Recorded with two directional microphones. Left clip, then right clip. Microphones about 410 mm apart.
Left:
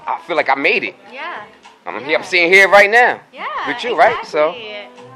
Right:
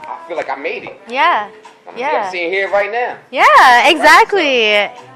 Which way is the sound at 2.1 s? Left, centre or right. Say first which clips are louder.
Left 5 dB; left.